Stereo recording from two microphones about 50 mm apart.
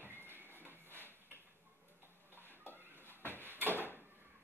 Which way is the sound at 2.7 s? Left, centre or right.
Right.